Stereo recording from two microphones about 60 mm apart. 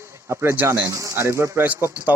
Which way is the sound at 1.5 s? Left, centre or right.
Right.